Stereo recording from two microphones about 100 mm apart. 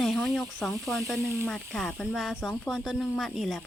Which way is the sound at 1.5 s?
5° left (ahead or behind).